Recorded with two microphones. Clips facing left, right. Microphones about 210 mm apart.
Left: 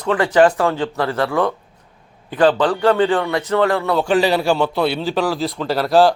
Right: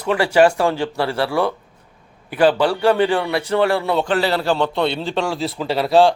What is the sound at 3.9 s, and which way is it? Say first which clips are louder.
A man's voice: left 3 dB; 10° left (ahead or behind).